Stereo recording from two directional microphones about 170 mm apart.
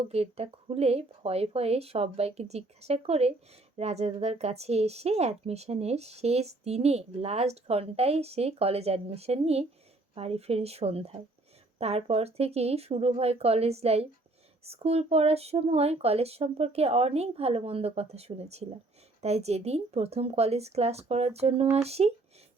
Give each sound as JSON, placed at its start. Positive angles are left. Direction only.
{"t": 0.0, "sound": "speech", "side_deg": -35}